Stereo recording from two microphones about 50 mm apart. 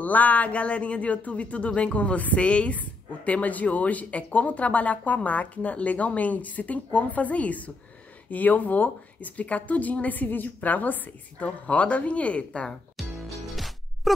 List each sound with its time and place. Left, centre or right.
0.0 s a woman's voice: left
12.9 s music: centre